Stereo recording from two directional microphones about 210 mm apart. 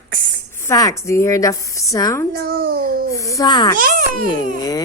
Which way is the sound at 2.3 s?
45° right (ahead or behind).